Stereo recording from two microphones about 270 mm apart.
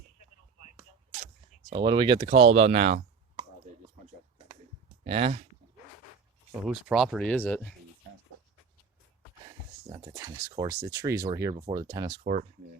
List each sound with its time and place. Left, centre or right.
1.7 s speech: centre
5.0 s speech: right
6.7 s speech: centre
9.9 s speech: centre
12.2 s speech: right